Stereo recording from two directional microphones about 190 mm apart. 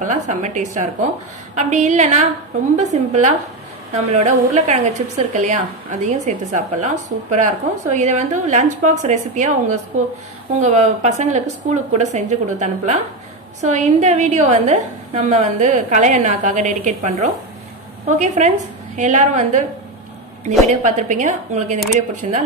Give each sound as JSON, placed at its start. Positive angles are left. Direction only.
{"t": 0.0, "sound": "a woman's voice", "side_deg": -40}